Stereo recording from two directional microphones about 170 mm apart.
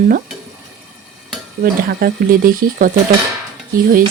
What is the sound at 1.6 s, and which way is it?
Speech, 60° right (ahead or behind).